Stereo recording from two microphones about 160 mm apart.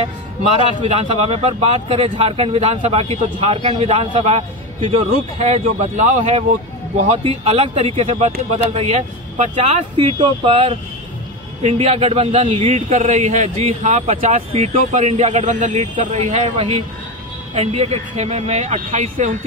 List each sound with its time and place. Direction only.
0.8 s speech: 40° right (ahead or behind)
7.1 s speech: 40° right (ahead or behind)
9.9 s speech: 30° right (ahead or behind); by 19.3 s 50° right (ahead or behind)